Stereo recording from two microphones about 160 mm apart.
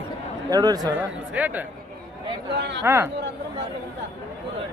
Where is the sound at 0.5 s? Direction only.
25° right (ahead or behind).